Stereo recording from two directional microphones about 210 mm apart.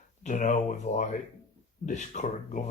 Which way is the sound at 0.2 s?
35° left (ahead or behind).